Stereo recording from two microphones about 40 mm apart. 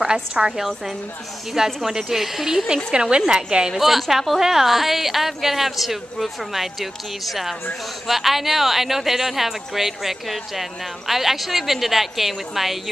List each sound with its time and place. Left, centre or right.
0.0 s a woman's voice: centre
3.7 s speech: centre